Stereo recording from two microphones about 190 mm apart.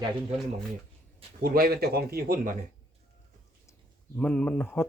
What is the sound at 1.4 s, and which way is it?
Speech, 50° right (ahead or behind).